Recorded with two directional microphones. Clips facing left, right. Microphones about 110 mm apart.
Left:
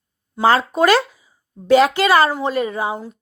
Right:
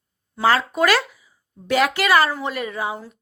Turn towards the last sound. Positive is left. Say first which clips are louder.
# left 4 dB
turn(degrees=25)  # may be behind; listen again after turning